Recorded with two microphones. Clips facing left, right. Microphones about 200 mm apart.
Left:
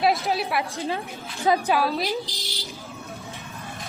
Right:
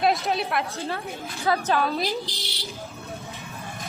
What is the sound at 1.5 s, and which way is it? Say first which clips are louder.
Speech: left 2 dB; 10° left (ahead or behind).